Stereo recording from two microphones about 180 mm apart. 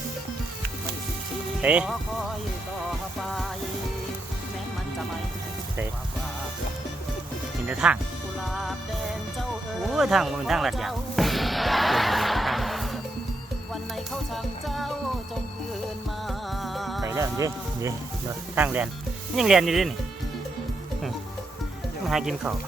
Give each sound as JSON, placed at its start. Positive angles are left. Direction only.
{"t": 1.6, "sound": "speech", "side_deg": -5}
{"t": 7.7, "sound": "speech", "side_deg": -5}
{"t": 8.4, "sound": "music", "side_deg": 0}
{"t": 9.9, "sound": "music", "side_deg": 0}
{"t": 16.2, "sound": "music", "side_deg": 0}
{"t": 17.0, "sound": "speech", "side_deg": -20}
{"t": 22.1, "sound": "speech", "side_deg": -5}